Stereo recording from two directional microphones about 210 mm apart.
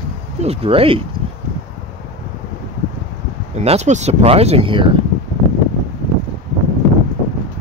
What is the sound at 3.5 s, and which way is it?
Speech, 30° right (ahead or behind).